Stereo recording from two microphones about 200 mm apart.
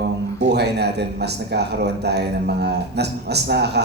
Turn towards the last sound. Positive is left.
turn(degrees=-55)  # may be behind; listen again after turning